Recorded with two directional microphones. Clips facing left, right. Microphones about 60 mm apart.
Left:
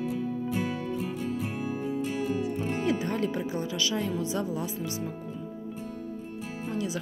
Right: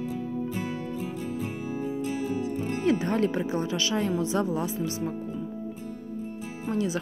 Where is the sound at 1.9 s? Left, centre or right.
Left.